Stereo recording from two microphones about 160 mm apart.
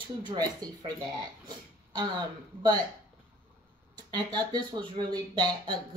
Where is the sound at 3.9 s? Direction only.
25° right (ahead or behind).